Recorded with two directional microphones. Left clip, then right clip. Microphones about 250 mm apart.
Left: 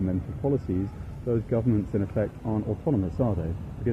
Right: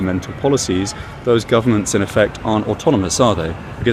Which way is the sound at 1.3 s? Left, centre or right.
Centre.